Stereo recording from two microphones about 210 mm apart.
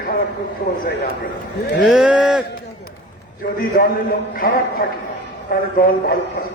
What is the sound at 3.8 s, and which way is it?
Speech, 50° left (ahead or behind).